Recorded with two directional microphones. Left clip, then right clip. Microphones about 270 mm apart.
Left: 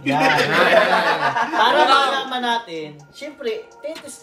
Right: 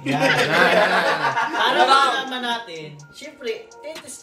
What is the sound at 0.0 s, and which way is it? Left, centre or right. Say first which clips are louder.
Speech: left 2 dB; centre.